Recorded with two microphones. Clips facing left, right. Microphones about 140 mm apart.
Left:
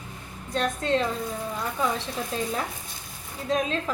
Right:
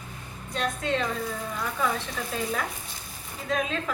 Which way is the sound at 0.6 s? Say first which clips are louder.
Left 3 dB; 35° left (ahead or behind).